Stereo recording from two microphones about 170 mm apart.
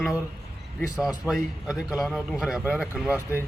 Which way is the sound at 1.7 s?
20° left (ahead or behind).